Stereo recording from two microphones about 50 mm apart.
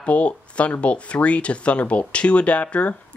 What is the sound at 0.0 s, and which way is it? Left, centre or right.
Speech, left.